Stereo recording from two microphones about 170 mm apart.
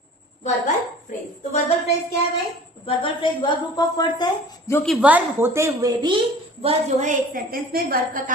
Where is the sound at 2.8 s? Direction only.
30° left (ahead or behind).